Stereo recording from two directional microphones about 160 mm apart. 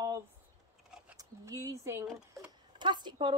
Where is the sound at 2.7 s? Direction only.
30° right (ahead or behind).